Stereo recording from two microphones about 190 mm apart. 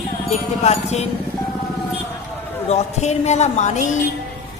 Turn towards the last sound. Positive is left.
turn(degrees=40)  # may be behind; listen again after turning